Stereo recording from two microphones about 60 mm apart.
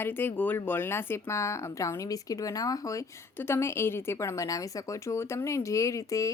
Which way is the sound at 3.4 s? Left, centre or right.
Left.